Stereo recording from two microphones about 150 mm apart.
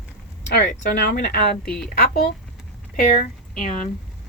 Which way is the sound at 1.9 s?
80° left.